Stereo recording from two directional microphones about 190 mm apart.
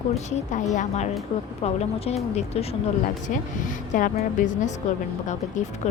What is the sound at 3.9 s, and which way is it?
A woman's voice, 40° left (ahead or behind).